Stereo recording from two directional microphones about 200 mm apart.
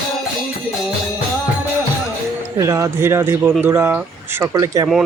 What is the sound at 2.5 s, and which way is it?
Speech, 15° right (ahead or behind).